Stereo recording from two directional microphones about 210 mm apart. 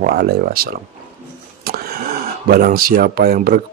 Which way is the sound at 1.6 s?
50° right (ahead or behind).